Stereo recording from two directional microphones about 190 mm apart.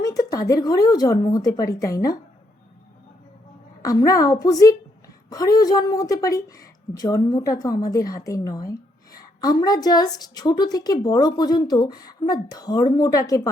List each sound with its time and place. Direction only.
0.0 s a woman's voice: 20° left (ahead or behind)
3.8 s a woman's voice: 20° left (ahead or behind)